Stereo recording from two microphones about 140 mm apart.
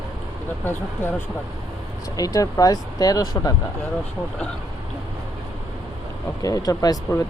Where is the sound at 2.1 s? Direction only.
25° left (ahead or behind).